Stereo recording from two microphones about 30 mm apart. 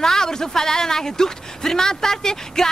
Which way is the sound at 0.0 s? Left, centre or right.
Centre.